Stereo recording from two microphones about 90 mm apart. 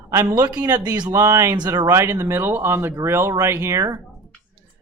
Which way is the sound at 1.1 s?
35° right (ahead or behind).